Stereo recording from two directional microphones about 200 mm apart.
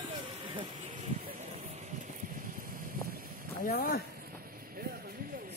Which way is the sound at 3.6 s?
50° left (ahead or behind).